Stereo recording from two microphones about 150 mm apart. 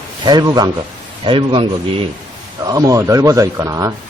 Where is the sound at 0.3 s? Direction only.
30° right (ahead or behind).